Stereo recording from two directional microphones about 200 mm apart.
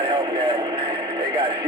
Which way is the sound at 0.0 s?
25° right (ahead or behind).